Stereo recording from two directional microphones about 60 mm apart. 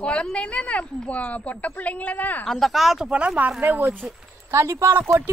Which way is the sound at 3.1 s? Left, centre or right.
Centre.